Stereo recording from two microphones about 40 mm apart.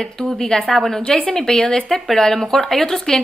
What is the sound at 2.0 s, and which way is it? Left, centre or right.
A woman's voice, centre.